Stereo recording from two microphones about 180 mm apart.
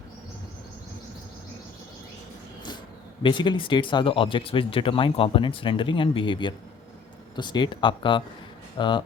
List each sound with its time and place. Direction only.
3.2 s speech: 25° left (ahead or behind)